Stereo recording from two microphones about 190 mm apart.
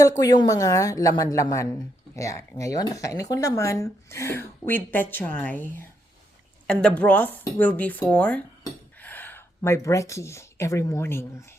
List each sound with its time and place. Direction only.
0.2 s speech: 20° left (ahead or behind)